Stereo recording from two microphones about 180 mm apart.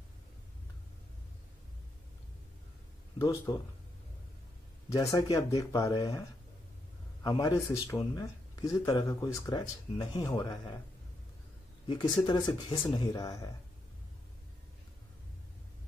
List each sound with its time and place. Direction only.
3.2 s speech: 15° left (ahead or behind)
4.8 s speech: 20° left (ahead or behind)
7.2 s speech: 20° left (ahead or behind)
11.9 s speech: 25° left (ahead or behind)